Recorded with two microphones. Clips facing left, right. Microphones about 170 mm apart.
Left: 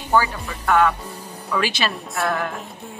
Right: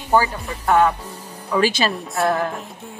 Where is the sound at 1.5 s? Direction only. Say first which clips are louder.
Right 4 dB; 40° right (ahead or behind).